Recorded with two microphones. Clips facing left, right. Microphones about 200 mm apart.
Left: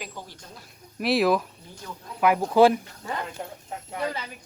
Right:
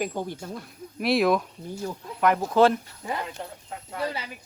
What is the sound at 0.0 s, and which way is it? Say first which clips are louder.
Speech: right 10 dB; 50° right (ahead or behind).